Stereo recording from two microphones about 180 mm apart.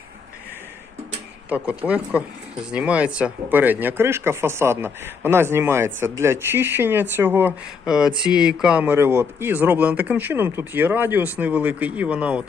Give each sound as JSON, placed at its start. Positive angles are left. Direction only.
{"t": 1.5, "sound": "speech", "side_deg": -10}